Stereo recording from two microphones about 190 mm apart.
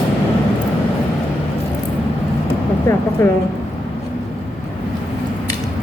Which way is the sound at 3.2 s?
15° left (ahead or behind).